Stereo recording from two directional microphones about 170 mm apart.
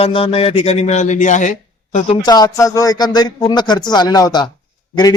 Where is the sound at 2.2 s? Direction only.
20° left (ahead or behind).